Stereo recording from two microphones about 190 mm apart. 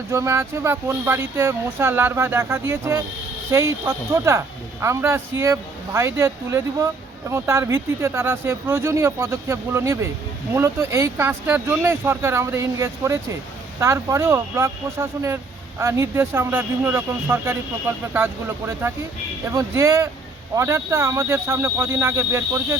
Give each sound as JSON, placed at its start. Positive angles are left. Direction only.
{"t": 0.1, "sound": "speech", "side_deg": -15}